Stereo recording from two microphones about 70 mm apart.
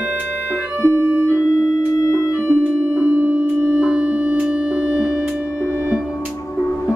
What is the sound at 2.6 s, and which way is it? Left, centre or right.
Music, right.